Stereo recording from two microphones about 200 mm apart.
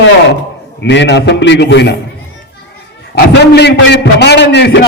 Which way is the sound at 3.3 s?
60° left (ahead or behind).